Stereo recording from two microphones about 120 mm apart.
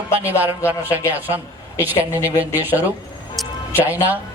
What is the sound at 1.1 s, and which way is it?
A woman's voice, 15° right (ahead or behind).